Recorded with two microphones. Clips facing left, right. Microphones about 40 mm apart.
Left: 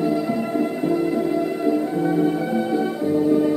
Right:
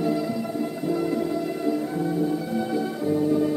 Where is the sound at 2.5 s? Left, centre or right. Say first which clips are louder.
Left 4 dB; centre.